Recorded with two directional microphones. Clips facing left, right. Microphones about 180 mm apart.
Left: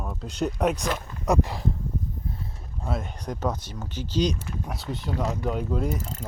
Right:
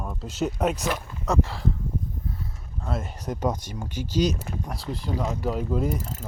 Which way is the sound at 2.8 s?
Centre (ahead or behind).